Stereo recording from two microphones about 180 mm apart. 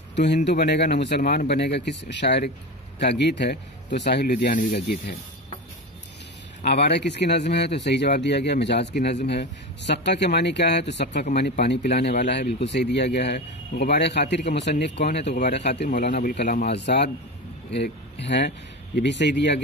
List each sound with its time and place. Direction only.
0.1 s speech: 75° left (ahead or behind)
6.6 s speech: 65° left (ahead or behind)
15.2 s speech: 40° left (ahead or behind)
16.3 s speech: 65° left (ahead or behind)